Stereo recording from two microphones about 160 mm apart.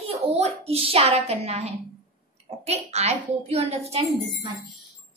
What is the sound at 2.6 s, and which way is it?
A woman's voice, 40° right (ahead or behind).